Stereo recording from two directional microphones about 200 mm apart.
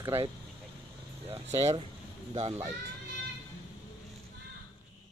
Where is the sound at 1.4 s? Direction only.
30° right (ahead or behind).